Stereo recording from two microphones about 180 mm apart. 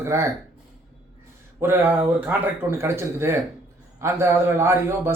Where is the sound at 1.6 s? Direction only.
15° right (ahead or behind).